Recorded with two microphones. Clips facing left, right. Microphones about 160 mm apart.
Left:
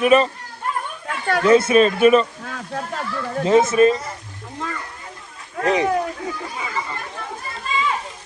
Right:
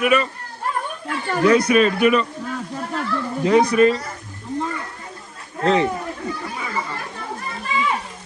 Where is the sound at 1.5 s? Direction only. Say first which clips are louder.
Left 1 dB; 25° left (ahead or behind).